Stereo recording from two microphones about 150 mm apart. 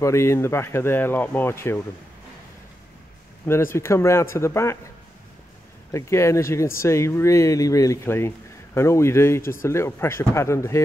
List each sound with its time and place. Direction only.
0.0 s speech: 20° left (ahead or behind)
3.4 s speech: 15° left (ahead or behind)
5.9 s speech: 20° left (ahead or behind)